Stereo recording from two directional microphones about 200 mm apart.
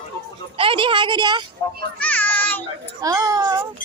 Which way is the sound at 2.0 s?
10° left (ahead or behind).